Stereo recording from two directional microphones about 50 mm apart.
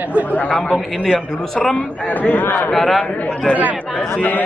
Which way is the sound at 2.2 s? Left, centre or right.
Left.